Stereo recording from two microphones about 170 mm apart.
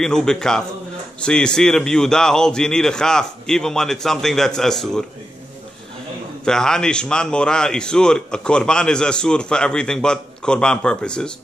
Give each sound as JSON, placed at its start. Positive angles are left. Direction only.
{"t": 0.0, "sound": "a man's voice", "side_deg": 5}
{"t": 6.4, "sound": "a man's voice", "side_deg": 5}